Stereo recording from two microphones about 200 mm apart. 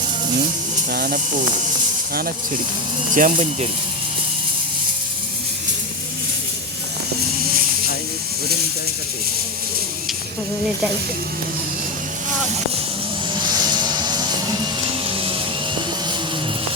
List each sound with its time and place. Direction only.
0.9 s speech: 45° right (ahead or behind)
3.2 s speech: 40° right (ahead or behind)
13.5 s a sound: 20° right (ahead or behind)